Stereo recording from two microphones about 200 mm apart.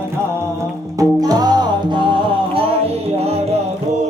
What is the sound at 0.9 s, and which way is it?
Music, 20° right (ahead or behind).